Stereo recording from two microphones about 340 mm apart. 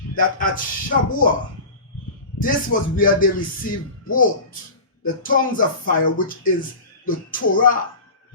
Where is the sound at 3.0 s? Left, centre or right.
Left.